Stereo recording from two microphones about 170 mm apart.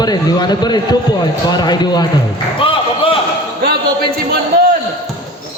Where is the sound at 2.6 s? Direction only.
30° left (ahead or behind).